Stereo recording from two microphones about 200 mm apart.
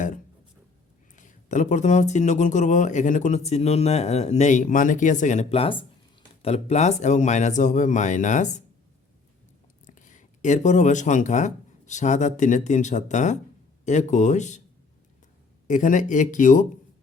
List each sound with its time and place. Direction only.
1.1 s speech: 40° left (ahead or behind)
9.8 s speech: 40° left (ahead or behind)
15.6 s speech: 40° left (ahead or behind)